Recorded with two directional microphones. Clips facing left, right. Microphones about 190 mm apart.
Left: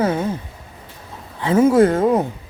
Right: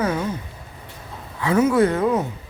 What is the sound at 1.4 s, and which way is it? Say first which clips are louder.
Speech: left 4 dB; 25° left (ahead or behind).